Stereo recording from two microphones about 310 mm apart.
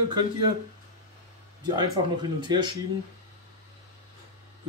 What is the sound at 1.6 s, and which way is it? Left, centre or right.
Speech, centre.